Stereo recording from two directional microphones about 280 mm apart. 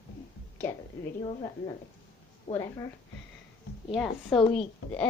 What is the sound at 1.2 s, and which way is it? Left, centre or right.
A woman's voice, centre.